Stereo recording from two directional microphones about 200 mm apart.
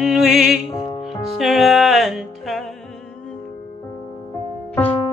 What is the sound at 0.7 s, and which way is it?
Music, 25° left (ahead or behind).